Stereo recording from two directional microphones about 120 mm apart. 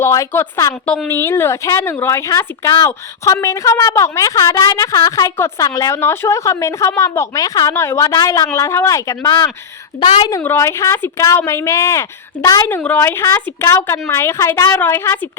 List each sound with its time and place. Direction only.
0.0 s a woman's voice: 25° left (ahead or behind)
10.4 s a woman's voice: 20° left (ahead or behind)
12.6 s a woman's voice: 15° left (ahead or behind)